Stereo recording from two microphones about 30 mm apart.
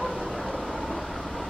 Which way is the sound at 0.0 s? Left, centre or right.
Centre.